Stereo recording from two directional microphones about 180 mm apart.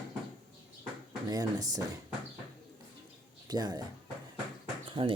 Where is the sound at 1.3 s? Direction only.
20° right (ahead or behind).